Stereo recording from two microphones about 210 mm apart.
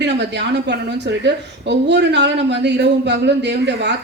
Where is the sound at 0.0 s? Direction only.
55° right (ahead or behind).